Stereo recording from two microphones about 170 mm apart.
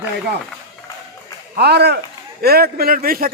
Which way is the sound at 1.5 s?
75° right (ahead or behind).